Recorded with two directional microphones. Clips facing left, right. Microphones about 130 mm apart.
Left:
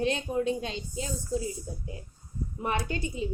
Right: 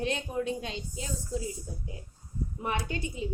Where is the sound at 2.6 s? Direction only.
35° left (ahead or behind).